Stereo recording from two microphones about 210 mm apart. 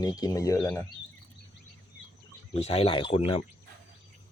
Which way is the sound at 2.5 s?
30° left (ahead or behind).